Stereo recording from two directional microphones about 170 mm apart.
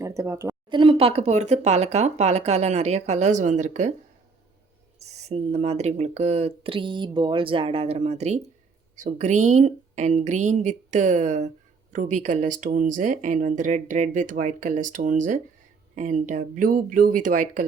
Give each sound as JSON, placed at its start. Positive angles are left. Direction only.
{"t": 0.0, "sound": "a woman's voice", "side_deg": -20}
{"t": 0.7, "sound": "speech", "side_deg": -30}
{"t": 4.9, "sound": "speech", "side_deg": -40}